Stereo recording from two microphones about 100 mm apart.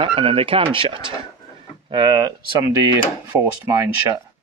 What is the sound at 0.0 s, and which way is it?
Speech, 65° right (ahead or behind).